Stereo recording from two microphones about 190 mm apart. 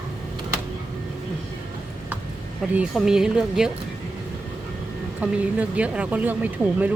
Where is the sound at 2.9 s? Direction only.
5° right (ahead or behind).